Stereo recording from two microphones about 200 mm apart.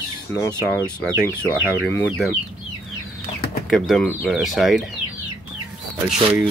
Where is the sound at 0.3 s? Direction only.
10° left (ahead or behind).